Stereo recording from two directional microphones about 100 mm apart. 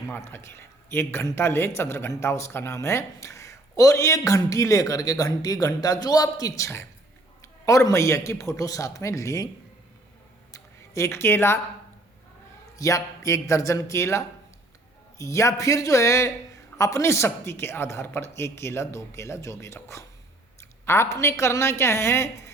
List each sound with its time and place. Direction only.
0.2 s a man's voice: 25° left (ahead or behind)
10.5 s a sound: 30° left (ahead or behind)
12.7 s a man's voice: 35° left (ahead or behind)